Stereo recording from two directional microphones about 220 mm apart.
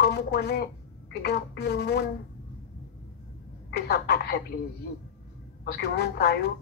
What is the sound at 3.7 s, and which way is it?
Speech, 50° left (ahead or behind).